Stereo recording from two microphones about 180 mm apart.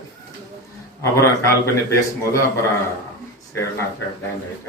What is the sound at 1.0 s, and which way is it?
Speech, 15° left (ahead or behind).